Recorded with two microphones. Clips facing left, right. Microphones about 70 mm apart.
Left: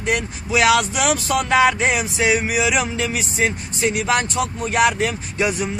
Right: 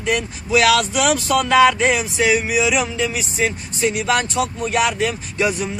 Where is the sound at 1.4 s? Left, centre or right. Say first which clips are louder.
Right 3 dB; left.